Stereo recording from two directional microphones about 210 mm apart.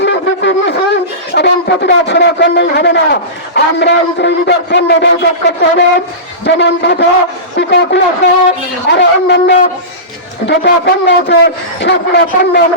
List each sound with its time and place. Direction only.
0.0 s shofar: 55° left (ahead or behind)
1.3 s a man's voice: 50° left (ahead or behind)